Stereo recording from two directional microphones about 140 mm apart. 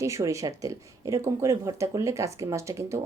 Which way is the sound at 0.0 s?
20° right (ahead or behind).